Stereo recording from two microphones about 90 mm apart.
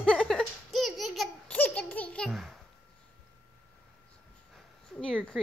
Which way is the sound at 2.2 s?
5° left (ahead or behind).